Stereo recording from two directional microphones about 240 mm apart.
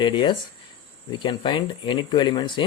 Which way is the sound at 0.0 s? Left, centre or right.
Centre.